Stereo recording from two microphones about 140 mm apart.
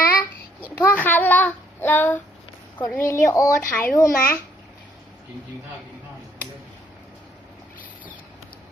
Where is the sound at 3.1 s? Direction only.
20° left (ahead or behind).